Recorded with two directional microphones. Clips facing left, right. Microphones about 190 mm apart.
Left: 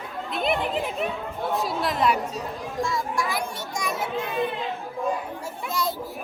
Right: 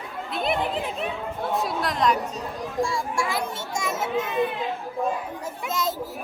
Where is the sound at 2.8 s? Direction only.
30° right (ahead or behind).